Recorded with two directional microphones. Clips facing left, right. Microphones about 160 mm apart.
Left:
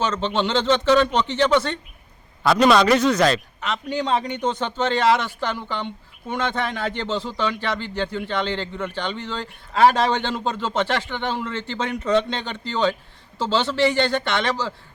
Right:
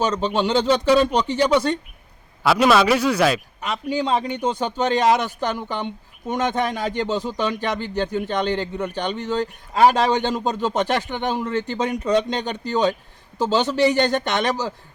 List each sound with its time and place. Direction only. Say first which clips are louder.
0.0 s speech: right 2 dB; 10° right (ahead or behind)